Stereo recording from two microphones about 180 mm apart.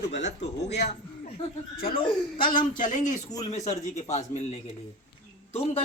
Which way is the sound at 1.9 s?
25° left (ahead or behind).